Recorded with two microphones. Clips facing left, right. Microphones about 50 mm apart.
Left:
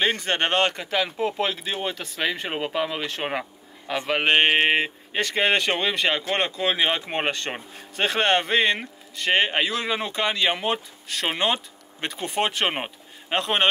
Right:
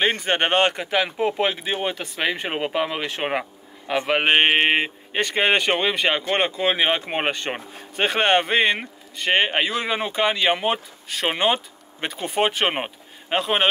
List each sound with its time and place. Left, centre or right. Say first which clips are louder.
0.2 s speech: right 3 dB; centre